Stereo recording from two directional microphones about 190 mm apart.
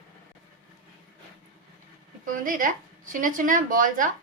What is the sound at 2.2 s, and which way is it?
Speech, 45° right (ahead or behind).